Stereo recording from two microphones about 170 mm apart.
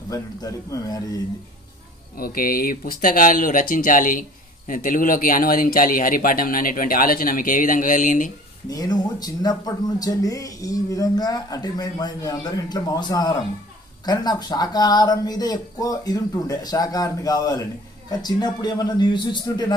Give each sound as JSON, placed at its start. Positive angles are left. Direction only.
{"t": 0.1, "sound": "speech", "side_deg": 20}
{"t": 2.1, "sound": "speech", "side_deg": 60}
{"t": 8.6, "sound": "speech", "side_deg": 20}